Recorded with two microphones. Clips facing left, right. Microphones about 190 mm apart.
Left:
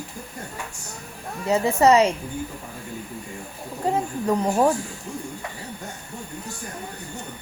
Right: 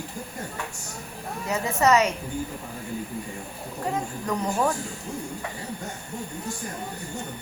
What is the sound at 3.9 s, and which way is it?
Speech, 30° left (ahead or behind).